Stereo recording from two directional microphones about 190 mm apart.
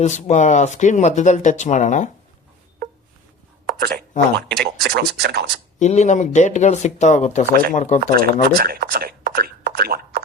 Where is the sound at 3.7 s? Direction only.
50° right (ahead or behind).